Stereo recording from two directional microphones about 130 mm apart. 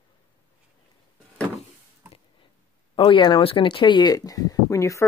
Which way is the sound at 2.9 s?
40° left (ahead or behind).